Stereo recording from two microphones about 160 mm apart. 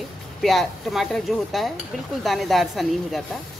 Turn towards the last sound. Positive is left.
turn(degrees=0)  # may be behind; listen again after turning